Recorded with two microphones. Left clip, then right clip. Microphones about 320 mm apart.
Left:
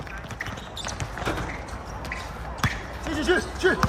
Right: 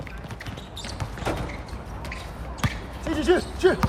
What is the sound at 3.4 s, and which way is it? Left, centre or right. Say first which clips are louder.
Speech: right 1 dB; right.